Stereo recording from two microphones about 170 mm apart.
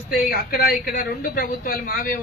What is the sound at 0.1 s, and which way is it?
Speech, 65° left (ahead or behind).